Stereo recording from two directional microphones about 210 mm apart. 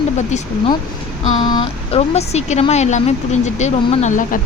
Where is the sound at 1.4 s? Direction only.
20° left (ahead or behind).